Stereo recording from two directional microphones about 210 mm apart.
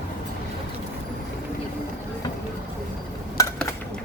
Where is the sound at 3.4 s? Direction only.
15° left (ahead or behind).